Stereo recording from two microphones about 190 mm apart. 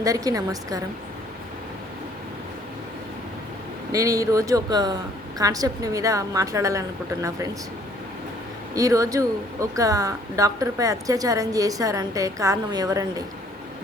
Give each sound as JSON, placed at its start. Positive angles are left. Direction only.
{"t": 0.0, "sound": "speech", "side_deg": -20}
{"t": 3.9, "sound": "speech", "side_deg": -15}
{"t": 8.7, "sound": "speech", "side_deg": -15}